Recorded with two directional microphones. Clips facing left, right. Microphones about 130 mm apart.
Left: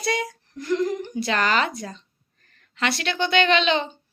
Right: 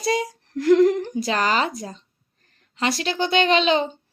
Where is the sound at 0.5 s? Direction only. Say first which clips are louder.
Right 9 dB; 90° right.